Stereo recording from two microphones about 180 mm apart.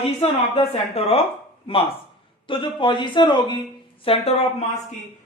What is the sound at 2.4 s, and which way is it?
A man's voice, 25° left (ahead or behind).